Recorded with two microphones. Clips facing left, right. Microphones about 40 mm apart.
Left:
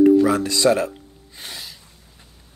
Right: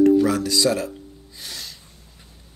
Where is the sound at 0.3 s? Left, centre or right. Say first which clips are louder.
Left 3 dB; left.